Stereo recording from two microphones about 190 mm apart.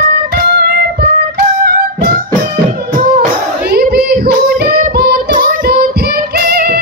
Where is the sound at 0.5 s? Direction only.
55° right (ahead or behind).